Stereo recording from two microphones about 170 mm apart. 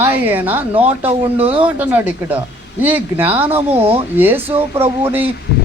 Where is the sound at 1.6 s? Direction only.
10° right (ahead or behind).